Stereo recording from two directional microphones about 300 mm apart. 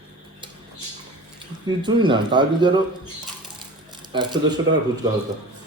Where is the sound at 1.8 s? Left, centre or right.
Centre.